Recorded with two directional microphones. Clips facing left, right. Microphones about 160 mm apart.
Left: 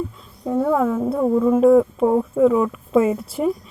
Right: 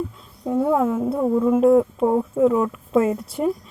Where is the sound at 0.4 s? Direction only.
10° right (ahead or behind).